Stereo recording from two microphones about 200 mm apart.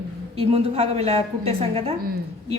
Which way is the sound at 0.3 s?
30° right (ahead or behind).